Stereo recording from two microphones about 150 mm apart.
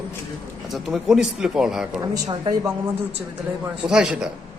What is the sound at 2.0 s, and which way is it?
Speech, 25° right (ahead or behind).